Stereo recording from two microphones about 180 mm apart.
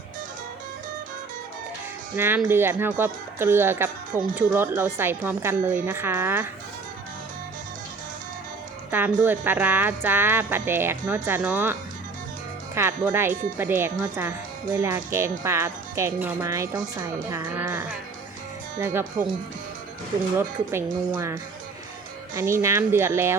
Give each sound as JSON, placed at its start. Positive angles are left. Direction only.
{"t": 2.1, "sound": "speech", "side_deg": -10}
{"t": 8.9, "sound": "a woman's voice", "side_deg": -10}
{"t": 20.7, "sound": "speech", "side_deg": -15}
{"t": 22.4, "sound": "speech", "side_deg": -15}